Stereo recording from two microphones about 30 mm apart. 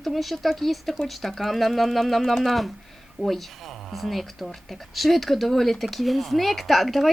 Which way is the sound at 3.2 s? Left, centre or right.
Right.